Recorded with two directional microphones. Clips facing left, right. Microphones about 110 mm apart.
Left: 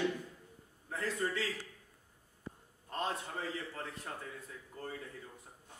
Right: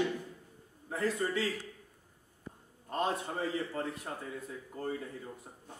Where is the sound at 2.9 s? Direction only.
10° right (ahead or behind).